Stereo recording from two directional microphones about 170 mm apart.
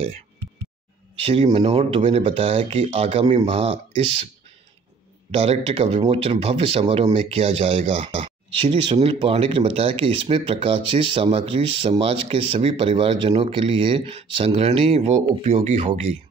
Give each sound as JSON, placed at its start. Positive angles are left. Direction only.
{"t": 1.2, "sound": "speech", "side_deg": -35}
{"t": 5.3, "sound": "speech", "side_deg": -35}